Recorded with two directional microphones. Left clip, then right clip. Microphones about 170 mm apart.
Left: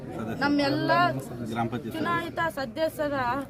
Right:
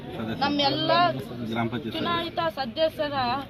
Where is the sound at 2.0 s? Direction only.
10° left (ahead or behind).